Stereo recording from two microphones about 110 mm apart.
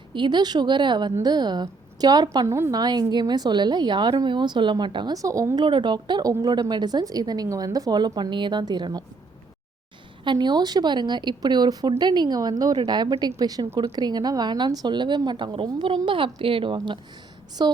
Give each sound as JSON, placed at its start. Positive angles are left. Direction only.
{"t": 0.1, "sound": "a woman's voice", "side_deg": -45}
{"t": 2.5, "sound": "a woman's voice", "side_deg": -25}
{"t": 2.8, "sound": "speech", "side_deg": -40}
{"t": 5.1, "sound": "speech", "side_deg": -30}
{"t": 5.6, "sound": "a woman's voice", "side_deg": -45}
{"t": 10.2, "sound": "a woman's voice", "side_deg": -40}